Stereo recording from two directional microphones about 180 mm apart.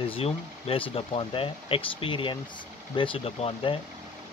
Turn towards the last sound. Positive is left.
turn(degrees=30)  # may be behind; listen again after turning